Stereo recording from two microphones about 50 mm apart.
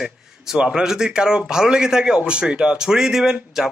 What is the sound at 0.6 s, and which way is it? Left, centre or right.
A man's voice, centre.